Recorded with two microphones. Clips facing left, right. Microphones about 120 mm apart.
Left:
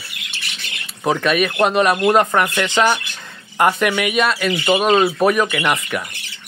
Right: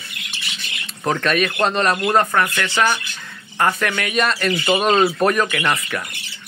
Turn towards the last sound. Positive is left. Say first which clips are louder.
# left 2 dB
turn(degrees=10)  # may be behind; listen again after turning